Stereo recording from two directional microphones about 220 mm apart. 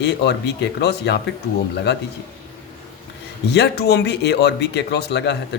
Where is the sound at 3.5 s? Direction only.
50° left (ahead or behind).